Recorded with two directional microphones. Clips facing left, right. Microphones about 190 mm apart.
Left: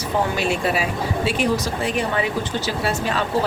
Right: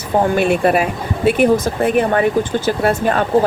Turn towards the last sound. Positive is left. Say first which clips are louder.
# right 7 dB
turn(degrees=-55)  # may be behind; listen again after turning